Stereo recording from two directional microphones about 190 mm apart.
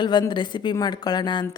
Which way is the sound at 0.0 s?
25° left (ahead or behind).